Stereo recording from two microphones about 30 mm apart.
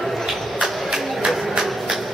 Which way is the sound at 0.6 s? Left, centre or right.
Centre.